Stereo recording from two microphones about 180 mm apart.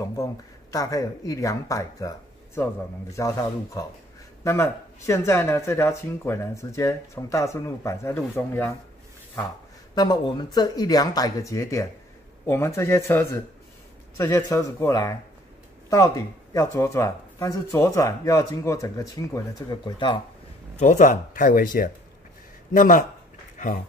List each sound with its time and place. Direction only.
0.0 s speech: 20° left (ahead or behind)
9.9 s speech: 25° left (ahead or behind)
16.5 s speech: 15° left (ahead or behind)
20.7 s speech: 40° left (ahead or behind)